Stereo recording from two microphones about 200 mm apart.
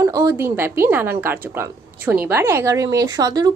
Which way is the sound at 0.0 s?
15° right (ahead or behind).